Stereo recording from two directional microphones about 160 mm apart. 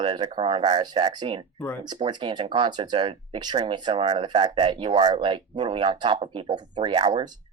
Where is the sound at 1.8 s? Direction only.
25° right (ahead or behind).